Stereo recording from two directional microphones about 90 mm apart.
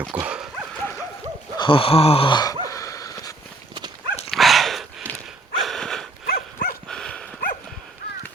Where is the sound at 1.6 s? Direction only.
80° left.